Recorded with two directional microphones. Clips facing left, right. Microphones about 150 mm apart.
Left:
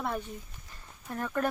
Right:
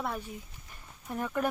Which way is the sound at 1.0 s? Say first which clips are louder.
Even; 10° right (ahead or behind).